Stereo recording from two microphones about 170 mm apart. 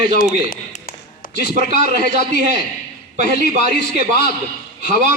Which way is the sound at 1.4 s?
45° right (ahead or behind).